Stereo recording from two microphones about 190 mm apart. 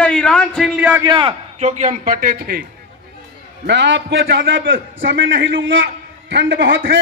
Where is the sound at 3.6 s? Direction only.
70° right (ahead or behind).